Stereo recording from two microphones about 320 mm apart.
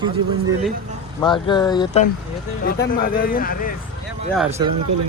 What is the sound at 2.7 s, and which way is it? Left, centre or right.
Speech, left.